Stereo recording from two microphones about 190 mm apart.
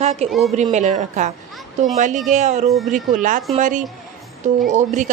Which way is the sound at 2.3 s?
35° right (ahead or behind).